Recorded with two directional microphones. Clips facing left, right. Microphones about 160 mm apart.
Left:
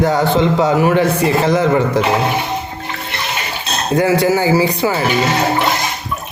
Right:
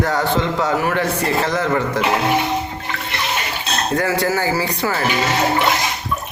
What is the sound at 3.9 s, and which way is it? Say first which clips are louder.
Speech: left 7 dB; 15° left (ahead or behind).